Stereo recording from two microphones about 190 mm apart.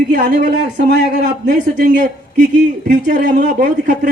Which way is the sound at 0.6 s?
70° right (ahead or behind).